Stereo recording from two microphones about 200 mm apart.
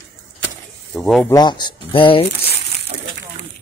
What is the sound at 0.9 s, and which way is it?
Speech, centre (ahead or behind).